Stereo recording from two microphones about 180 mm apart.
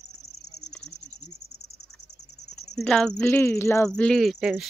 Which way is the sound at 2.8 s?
5° left (ahead or behind).